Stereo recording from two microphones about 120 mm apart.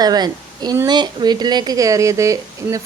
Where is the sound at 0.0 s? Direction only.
35° right (ahead or behind).